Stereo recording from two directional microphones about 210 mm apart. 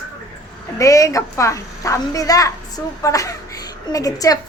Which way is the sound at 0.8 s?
15° left (ahead or behind).